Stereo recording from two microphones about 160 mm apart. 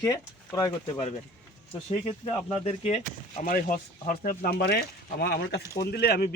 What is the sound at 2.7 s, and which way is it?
Speech, 40° left (ahead or behind).